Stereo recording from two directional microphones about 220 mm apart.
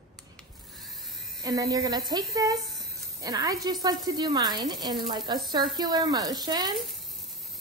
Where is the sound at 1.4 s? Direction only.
15° right (ahead or behind).